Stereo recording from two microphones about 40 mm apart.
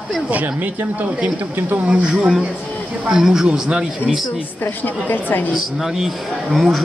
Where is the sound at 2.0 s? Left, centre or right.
Centre.